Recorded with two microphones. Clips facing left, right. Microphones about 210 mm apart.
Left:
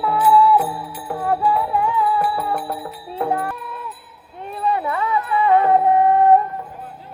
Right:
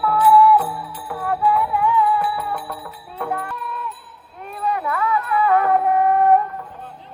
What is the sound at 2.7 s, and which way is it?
Music, 30° left (ahead or behind).